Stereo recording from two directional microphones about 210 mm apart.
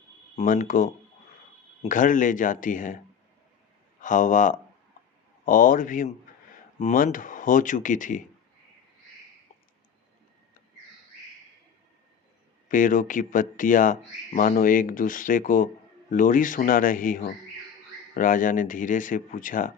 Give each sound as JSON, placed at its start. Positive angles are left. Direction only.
{"t": 0.3, "sound": "speech", "side_deg": 35}
{"t": 4.0, "sound": "speech", "side_deg": 40}
{"t": 12.6, "sound": "speech", "side_deg": 40}